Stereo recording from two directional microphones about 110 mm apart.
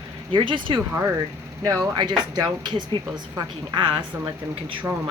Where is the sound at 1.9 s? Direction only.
40° right (ahead or behind).